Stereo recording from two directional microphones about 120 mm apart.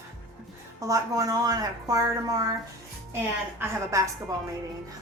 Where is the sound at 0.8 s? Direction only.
30° right (ahead or behind).